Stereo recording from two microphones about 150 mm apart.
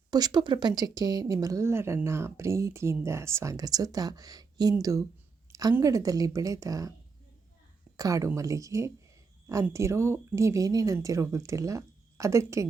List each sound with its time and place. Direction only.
0.1 s speech: 25° right (ahead or behind)
5.5 s a sound: 25° right (ahead or behind)
5.7 s speech: 20° right (ahead or behind)
7.9 s speech: 25° right (ahead or behind)